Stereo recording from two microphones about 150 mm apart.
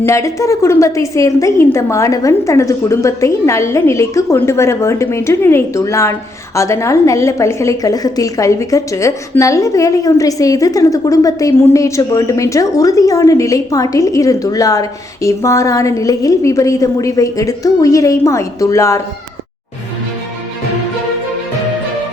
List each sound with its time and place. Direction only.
0.0 s a woman's voice: 20° left (ahead or behind)